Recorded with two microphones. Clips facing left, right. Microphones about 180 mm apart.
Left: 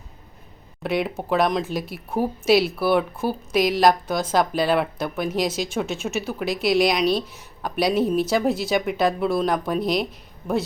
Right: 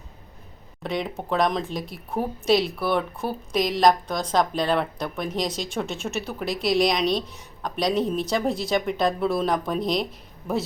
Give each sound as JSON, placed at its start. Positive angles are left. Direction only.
{"t": 0.8, "sound": "speech", "side_deg": 5}